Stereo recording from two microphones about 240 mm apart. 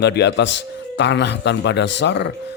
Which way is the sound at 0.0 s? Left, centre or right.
Left.